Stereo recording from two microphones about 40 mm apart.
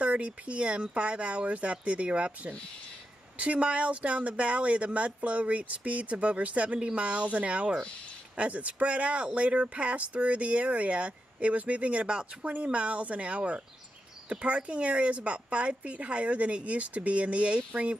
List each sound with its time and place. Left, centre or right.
0.0 s speech: right
12.4 s speech: right